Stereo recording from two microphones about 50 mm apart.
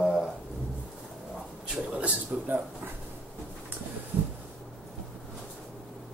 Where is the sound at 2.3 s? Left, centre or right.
Right.